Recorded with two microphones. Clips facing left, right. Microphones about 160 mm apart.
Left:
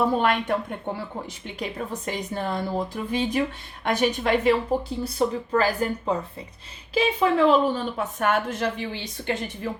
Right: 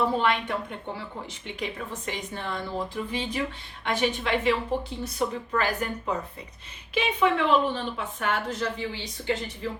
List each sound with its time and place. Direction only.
0.2 s a woman's voice: 45° left (ahead or behind)
1.5 s a woman's voice: 40° left (ahead or behind); by 9.4 s 60° left (ahead or behind)